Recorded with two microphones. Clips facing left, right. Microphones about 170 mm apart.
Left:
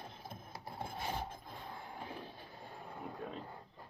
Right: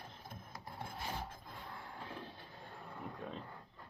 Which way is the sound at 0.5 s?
30° left (ahead or behind).